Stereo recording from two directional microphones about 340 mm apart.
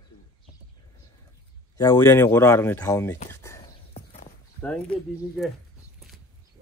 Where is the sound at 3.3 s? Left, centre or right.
Centre.